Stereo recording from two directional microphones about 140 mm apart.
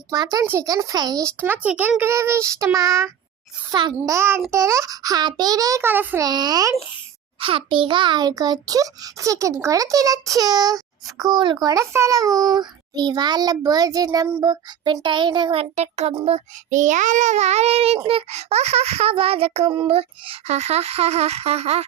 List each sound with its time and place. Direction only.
0.1 s a child's voice: 25° right (ahead or behind)
1.5 s a child's voice: 10° right (ahead or behind)
3.7 s a child's voice: 35° right (ahead or behind)
3.9 s a child's voice: 20° right (ahead or behind)
6.2 s a child's voice: 30° right (ahead or behind)
7.3 s a child's voice: 40° right (ahead or behind)
15.7 s a child's voice: 50° right (ahead or behind)